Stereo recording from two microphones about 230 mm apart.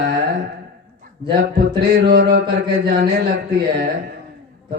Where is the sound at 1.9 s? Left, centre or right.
Right.